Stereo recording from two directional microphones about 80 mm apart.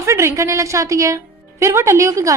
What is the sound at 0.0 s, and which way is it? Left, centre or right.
A woman's voice, right.